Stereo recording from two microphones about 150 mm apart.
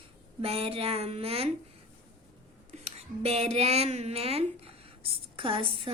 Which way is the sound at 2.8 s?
45° right (ahead or behind).